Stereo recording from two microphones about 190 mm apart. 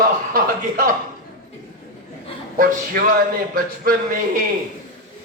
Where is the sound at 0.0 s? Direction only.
50° right (ahead or behind).